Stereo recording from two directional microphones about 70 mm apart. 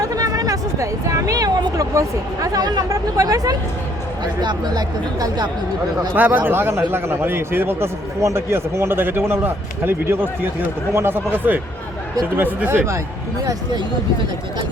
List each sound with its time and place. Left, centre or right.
0.0 s a sound: right
1.8 s speech: right
4.4 s speech: right
6.1 s speech: right